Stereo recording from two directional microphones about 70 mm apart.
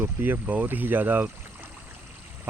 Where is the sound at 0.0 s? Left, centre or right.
Right.